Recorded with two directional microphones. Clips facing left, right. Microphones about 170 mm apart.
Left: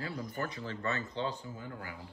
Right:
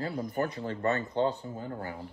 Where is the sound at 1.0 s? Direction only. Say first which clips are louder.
Right 8 dB; 60° right (ahead or behind).